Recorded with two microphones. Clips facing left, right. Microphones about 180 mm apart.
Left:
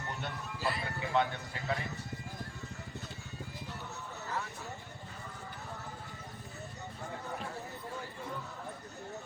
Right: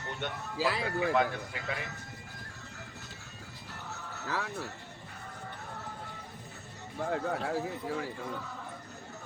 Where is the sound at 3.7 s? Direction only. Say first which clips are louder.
Even; 90° right.